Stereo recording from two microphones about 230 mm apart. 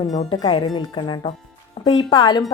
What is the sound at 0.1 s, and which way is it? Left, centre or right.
Speech, left.